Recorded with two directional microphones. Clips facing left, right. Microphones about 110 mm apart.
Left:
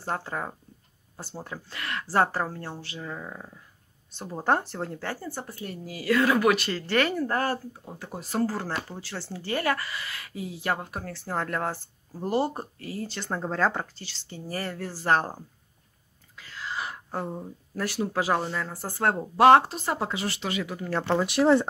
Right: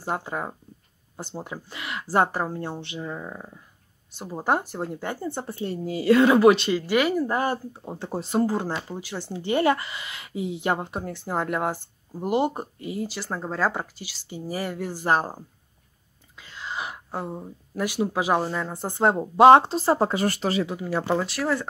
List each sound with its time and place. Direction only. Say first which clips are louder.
0.0 s speech: right 2 dB; 15° right (ahead or behind)
6.7 s speech: right 4 dB; 10° right (ahead or behind)
7.7 s speech: right 7 dB; 25° right (ahead or behind)
13.1 s speech: even; 5° right (ahead or behind); by 20.6 s 40° right (ahead or behind)
20.6 s speech: right 2 dB; 10° right (ahead or behind)
21.3 s speech: left 6 dB; 25° left (ahead or behind)